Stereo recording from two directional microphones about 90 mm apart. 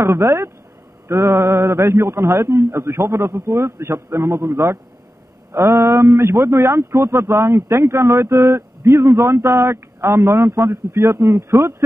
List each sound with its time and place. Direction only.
0.0 s a man's voice: 30° right (ahead or behind)